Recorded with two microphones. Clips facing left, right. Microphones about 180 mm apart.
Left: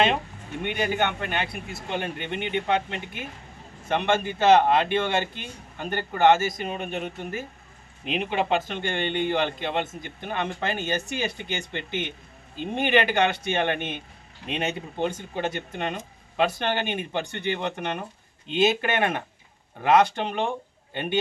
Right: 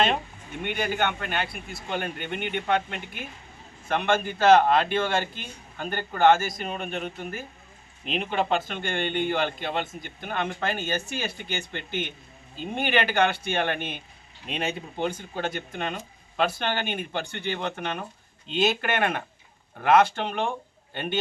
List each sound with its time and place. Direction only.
0.8 s a man's voice: 15° left (ahead or behind)